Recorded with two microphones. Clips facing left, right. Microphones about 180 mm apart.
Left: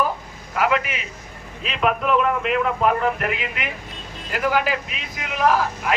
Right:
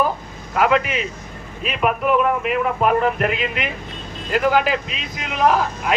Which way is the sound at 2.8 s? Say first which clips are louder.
Right 3 dB; 25° right (ahead or behind).